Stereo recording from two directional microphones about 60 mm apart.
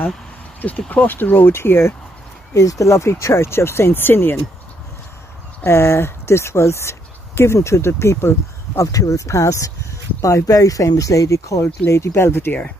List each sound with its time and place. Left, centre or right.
0.6 s speech: left
2.5 s speech: left
2.9 s speech: left
5.7 s speech: left
8.9 s speech: left
10.2 s speech: left
11.9 s speech: left